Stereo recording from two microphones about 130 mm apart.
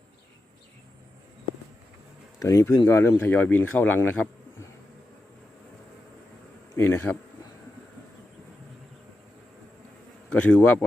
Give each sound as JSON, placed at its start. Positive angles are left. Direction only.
{"t": 2.4, "sound": "speech", "side_deg": 25}
{"t": 6.7, "sound": "speech", "side_deg": 15}
{"t": 10.2, "sound": "speech", "side_deg": 10}